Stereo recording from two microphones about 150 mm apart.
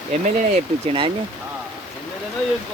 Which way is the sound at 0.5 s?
40° right (ahead or behind).